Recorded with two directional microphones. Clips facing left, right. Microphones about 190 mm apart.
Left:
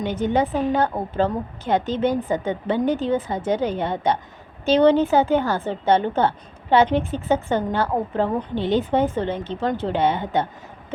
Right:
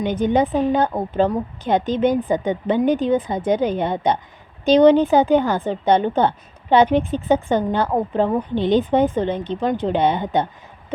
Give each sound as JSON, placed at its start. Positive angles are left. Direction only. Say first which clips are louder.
{"t": 0.0, "sound": "a woman's voice", "louder": "right 3 dB", "side_deg": -15}